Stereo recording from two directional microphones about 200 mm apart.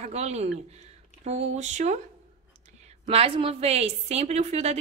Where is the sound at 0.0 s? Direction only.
35° right (ahead or behind).